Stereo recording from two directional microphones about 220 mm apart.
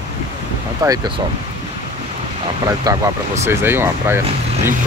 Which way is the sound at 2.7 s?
15° right (ahead or behind).